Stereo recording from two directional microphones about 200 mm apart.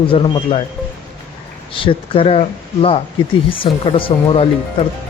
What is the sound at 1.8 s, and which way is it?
Speech, 25° left (ahead or behind).